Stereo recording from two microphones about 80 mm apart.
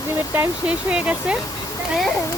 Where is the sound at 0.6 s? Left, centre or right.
Centre.